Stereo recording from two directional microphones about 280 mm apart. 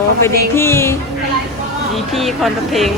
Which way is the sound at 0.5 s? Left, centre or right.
Centre.